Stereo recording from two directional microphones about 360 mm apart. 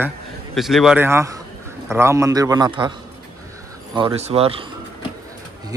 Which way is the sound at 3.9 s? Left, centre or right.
Centre.